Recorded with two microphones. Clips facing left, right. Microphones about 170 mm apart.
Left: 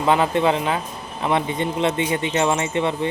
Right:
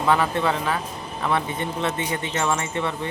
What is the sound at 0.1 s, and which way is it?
Speech, 20° left (ahead or behind).